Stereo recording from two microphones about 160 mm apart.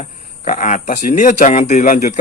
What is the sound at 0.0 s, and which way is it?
Speech, 50° left (ahead or behind).